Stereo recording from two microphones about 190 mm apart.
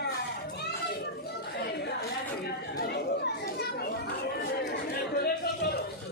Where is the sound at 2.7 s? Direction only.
60° left (ahead or behind).